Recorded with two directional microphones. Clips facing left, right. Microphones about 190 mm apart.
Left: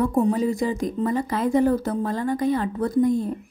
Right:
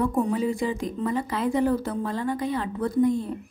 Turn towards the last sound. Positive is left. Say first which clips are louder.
# left 2 dB
turn(degrees=45)  # may be behind; listen again after turning